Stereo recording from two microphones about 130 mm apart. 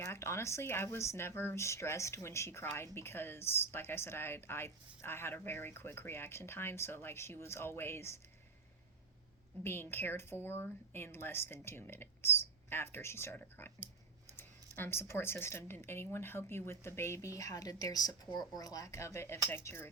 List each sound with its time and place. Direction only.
0.0 s speech: 20° left (ahead or behind)
9.6 s a woman's voice: 15° left (ahead or behind)